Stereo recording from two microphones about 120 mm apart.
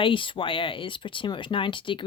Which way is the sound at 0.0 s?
45° left (ahead or behind).